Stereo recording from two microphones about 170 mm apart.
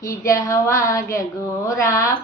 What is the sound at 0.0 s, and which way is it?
A woman's voice, 20° left (ahead or behind).